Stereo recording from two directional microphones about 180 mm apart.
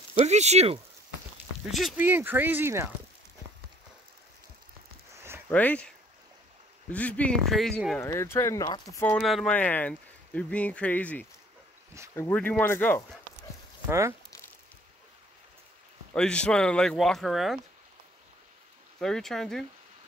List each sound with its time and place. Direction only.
0.2 s speech: 40° right (ahead or behind)
1.7 s speech: centre (ahead or behind)
2.0 s speech: 10° right (ahead or behind)
5.1 s a sound: 15° right (ahead or behind)
5.5 s speech: 10° left (ahead or behind)
8.0 s speech: 15° left (ahead or behind)
9.2 s speech: centre (ahead or behind)
13.8 s speech: 15° right (ahead or behind)
16.2 s speech: 5° left (ahead or behind)
18.9 s speech: centre (ahead or behind)